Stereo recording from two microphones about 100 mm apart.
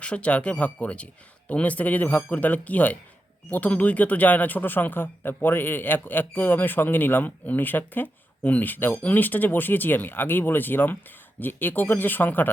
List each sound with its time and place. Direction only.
0.0 s speech: 10° left (ahead or behind)